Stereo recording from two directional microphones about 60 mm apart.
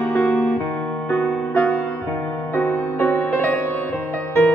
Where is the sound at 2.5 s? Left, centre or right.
Left.